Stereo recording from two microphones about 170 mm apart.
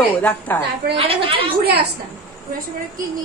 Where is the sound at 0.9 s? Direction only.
35° right (ahead or behind).